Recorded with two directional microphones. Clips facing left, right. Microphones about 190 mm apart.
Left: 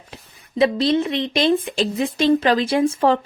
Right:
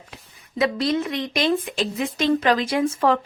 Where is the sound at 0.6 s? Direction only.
30° left (ahead or behind).